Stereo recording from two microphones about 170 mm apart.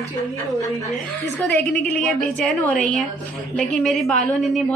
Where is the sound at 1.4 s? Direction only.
10° left (ahead or behind).